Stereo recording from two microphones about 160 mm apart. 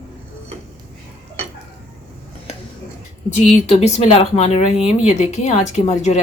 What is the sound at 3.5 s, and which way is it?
Speech, 40° left (ahead or behind).